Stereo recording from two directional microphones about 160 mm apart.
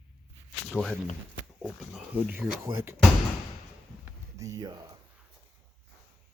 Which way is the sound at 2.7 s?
15° right (ahead or behind).